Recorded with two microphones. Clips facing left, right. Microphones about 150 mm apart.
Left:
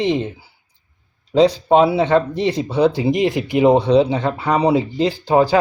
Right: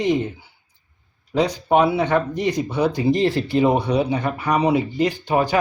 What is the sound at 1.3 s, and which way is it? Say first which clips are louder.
Speech: left 5 dB; 30° left (ahead or behind).